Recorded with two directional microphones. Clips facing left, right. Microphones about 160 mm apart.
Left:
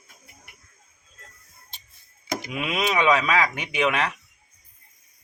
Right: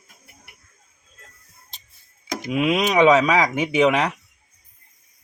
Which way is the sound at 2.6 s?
15° right (ahead or behind).